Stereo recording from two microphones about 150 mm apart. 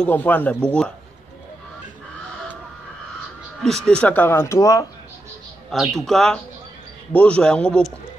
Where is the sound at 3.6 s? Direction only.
5° left (ahead or behind); by 4.9 s 20° left (ahead or behind).